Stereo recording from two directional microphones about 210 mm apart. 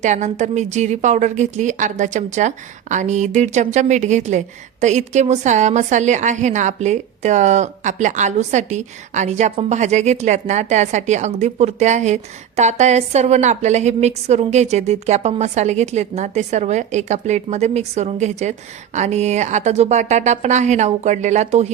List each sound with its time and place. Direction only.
0.0 s speech: 35° right (ahead or behind)